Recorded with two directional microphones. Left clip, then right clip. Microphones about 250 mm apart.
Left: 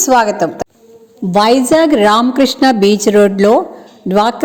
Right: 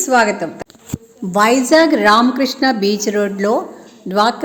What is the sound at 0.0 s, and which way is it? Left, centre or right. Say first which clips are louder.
A woman's voice: left 3 dB; centre.